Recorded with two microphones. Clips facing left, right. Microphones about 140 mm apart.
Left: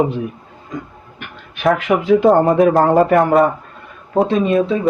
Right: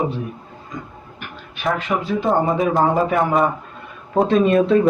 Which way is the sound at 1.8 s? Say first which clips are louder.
Left 8 dB; 80° left.